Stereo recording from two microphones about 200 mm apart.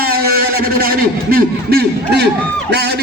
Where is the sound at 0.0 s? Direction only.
50° right (ahead or behind).